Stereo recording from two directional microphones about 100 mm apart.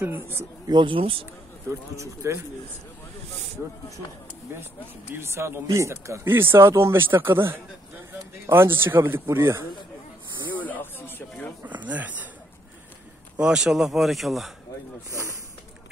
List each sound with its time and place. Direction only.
0.0 s speech: 20° right (ahead or behind)
0.7 s speech: 50° right (ahead or behind)
1.7 s speech: 30° right (ahead or behind)
5.1 s speech: 25° right (ahead or behind)
10.6 s a sound: 20° left (ahead or behind)
11.6 s speech: 15° right (ahead or behind)
13.4 s speech: 5° right (ahead or behind)
15.0 s speech: 30° right (ahead or behind)